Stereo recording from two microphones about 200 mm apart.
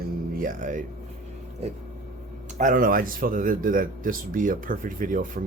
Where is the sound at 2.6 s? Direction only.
40° right (ahead or behind).